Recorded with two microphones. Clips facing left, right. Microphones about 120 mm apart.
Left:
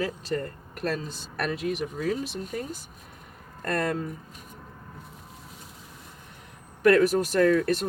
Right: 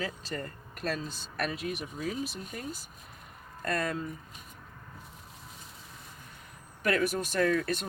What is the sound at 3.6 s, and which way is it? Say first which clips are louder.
Speech: left 4 dB; 60° left (ahead or behind).